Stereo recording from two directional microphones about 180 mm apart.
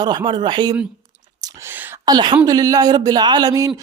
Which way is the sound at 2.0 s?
25° right (ahead or behind).